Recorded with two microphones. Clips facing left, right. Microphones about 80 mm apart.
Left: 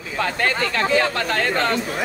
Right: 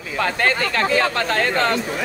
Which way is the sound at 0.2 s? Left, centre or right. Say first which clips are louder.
Right 2 dB; right.